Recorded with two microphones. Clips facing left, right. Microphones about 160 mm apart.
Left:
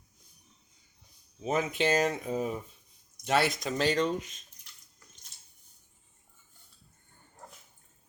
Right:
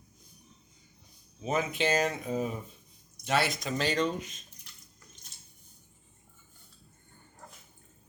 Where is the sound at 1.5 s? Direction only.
40° left (ahead or behind).